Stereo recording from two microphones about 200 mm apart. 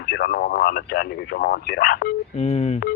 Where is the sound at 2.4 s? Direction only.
30° left (ahead or behind).